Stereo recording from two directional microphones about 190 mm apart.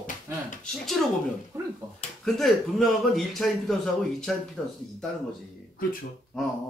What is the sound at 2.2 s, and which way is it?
Speech, centre (ahead or behind).